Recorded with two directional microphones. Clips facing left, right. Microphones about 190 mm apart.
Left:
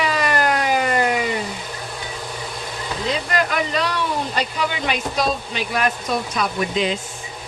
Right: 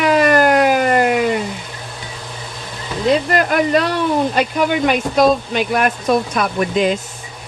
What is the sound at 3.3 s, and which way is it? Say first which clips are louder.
Speech: right 7 dB; 50° right (ahead or behind).